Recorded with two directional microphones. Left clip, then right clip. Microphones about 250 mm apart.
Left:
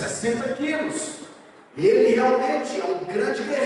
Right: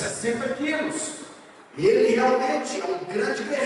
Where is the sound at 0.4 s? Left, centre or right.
Centre.